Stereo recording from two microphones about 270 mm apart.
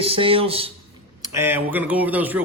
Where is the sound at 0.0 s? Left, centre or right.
Centre.